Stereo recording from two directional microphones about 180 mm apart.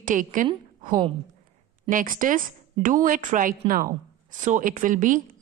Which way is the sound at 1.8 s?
50° right (ahead or behind).